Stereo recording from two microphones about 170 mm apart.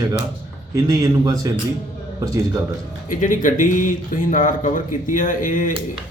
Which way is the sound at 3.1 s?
50° left (ahead or behind).